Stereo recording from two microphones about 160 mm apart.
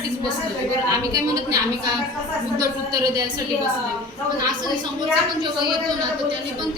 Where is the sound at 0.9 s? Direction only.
20° right (ahead or behind).